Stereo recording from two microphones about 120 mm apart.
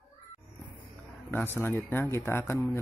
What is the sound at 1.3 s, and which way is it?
Speech, 15° left (ahead or behind).